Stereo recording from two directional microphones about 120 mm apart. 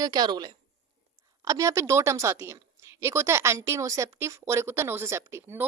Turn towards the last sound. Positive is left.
turn(degrees=-20)  # may be behind; listen again after turning